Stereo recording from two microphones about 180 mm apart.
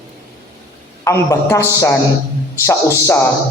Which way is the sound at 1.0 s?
15° left (ahead or behind).